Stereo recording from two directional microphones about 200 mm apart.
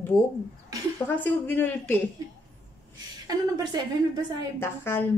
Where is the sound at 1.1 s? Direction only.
10° left (ahead or behind).